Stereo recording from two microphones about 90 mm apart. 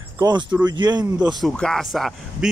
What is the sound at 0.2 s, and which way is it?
Speech, 55° right (ahead or behind).